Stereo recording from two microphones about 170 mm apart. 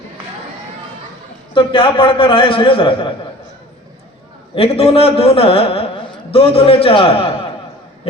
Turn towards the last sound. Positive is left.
turn(degrees=35)  # may be behind; listen again after turning